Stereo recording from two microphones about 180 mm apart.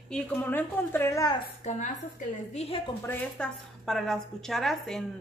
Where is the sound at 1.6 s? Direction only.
40° left (ahead or behind).